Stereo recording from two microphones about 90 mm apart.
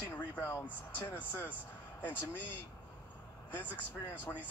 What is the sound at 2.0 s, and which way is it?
Speech, 15° right (ahead or behind).